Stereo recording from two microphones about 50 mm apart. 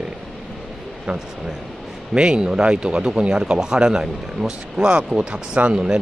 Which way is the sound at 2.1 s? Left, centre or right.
Centre.